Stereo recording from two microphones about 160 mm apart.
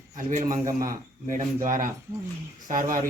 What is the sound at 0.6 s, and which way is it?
Speech, 20° right (ahead or behind).